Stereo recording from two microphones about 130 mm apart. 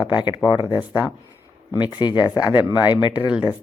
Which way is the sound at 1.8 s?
35° left (ahead or behind).